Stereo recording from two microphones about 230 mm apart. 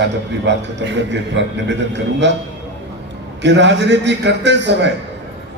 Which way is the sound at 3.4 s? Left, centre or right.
Right.